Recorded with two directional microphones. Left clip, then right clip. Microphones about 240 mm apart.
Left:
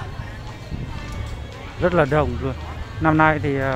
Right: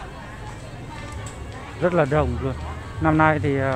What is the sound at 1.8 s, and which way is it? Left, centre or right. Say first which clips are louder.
Speech: left 2 dB; centre.